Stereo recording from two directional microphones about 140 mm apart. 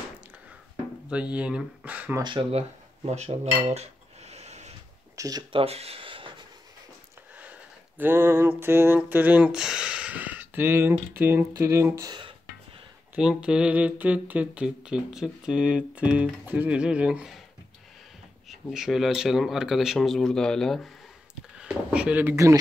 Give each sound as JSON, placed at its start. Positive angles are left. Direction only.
{"t": 1.1, "sound": "speech", "side_deg": -10}
{"t": 2.2, "sound": "speech", "side_deg": -35}
{"t": 3.1, "sound": "cutlery", "side_deg": -50}
{"t": 5.1, "sound": "speech", "side_deg": -25}
{"t": 5.5, "sound": "a sound", "side_deg": -45}
{"t": 8.0, "sound": "speech", "side_deg": -15}
{"t": 13.1, "sound": "speech", "side_deg": -5}
{"t": 18.5, "sound": "speech", "side_deg": -5}